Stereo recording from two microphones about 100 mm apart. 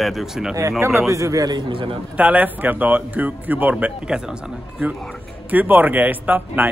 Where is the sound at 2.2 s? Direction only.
15° right (ahead or behind).